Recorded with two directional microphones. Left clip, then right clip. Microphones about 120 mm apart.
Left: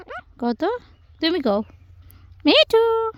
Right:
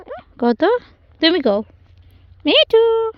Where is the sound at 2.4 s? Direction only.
60° left (ahead or behind).